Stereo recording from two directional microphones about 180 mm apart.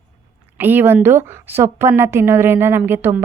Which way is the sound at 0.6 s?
10° right (ahead or behind).